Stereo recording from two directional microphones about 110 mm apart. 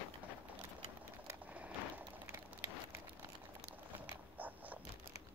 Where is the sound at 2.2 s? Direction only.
25° right (ahead or behind).